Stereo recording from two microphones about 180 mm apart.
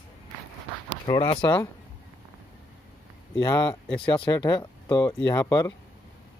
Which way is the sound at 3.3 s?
25° left (ahead or behind).